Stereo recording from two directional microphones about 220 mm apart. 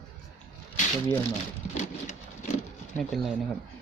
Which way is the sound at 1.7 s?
30° left (ahead or behind).